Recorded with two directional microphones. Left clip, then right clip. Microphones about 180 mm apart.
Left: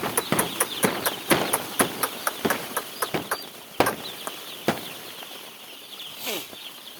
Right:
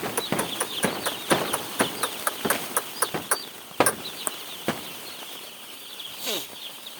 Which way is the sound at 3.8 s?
70° left (ahead or behind).